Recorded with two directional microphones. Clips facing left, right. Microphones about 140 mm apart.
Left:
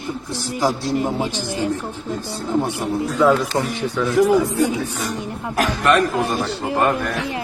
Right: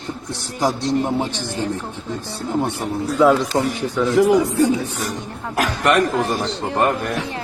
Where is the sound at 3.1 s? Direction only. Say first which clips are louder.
Right 2 dB; 10° right (ahead or behind).